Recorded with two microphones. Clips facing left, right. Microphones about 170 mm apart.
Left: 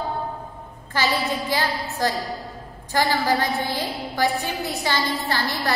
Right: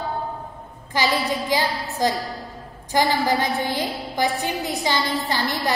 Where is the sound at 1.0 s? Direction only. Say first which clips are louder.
Right 1 dB; 15° right (ahead or behind).